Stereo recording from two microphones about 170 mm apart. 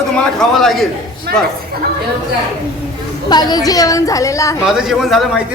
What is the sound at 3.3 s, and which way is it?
A woman's voice, 25° left (ahead or behind).